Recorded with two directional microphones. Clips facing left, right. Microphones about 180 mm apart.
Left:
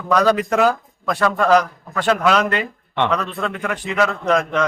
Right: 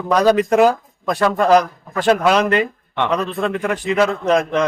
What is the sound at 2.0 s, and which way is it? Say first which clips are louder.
A man's voice: right 2 dB; 35° right (ahead or behind).